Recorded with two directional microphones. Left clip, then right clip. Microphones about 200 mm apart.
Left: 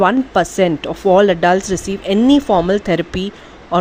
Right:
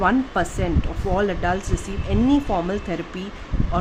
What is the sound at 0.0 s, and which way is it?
Speech, 40° left (ahead or behind).